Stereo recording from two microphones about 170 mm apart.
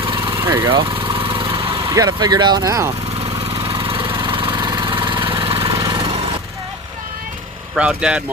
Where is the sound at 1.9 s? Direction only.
20° right (ahead or behind).